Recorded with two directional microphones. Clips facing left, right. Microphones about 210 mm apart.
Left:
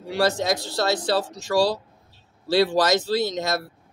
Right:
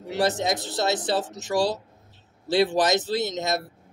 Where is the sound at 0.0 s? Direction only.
20° right (ahead or behind).